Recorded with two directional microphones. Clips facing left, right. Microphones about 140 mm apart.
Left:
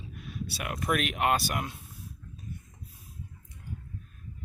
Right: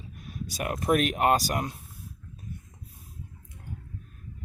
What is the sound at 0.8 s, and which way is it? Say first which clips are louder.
Speech: right 5 dB; 35° right (ahead or behind).